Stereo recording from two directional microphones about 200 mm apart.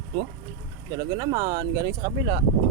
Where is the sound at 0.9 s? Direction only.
15° right (ahead or behind).